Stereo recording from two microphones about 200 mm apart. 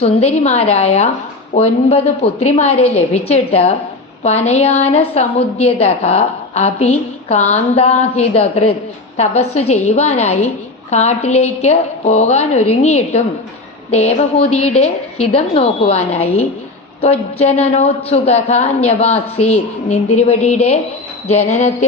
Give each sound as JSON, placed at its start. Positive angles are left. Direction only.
{"t": 0.0, "sound": "a woman's voice", "side_deg": 35}